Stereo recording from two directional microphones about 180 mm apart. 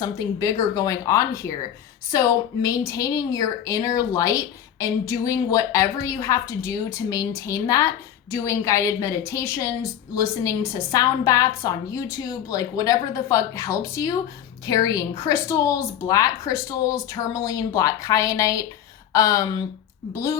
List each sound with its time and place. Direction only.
0.0 s a woman's voice: 20° left (ahead or behind)